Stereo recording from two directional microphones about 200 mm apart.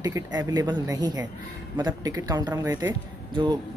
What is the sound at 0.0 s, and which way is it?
Speech, 15° right (ahead or behind).